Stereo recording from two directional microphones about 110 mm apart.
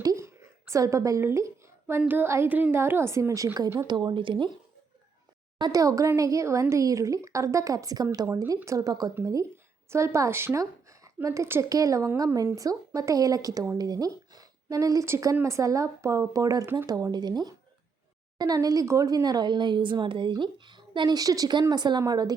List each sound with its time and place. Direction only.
0.0 s a sound: 30° right (ahead or behind)
0.6 s a woman's voice: 25° right (ahead or behind); by 4.5 s 45° right (ahead or behind)
5.5 s a woman's voice: 35° right (ahead or behind)